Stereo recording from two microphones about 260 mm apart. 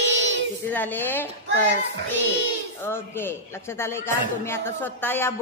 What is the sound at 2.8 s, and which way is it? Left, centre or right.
A man's voice, centre.